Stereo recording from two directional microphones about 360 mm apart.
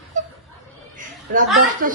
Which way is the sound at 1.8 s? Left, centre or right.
Right.